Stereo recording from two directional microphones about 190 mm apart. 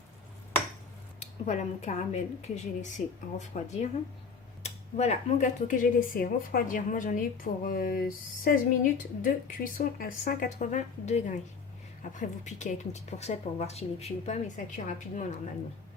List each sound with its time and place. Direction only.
1.2 s speech: 35° left (ahead or behind)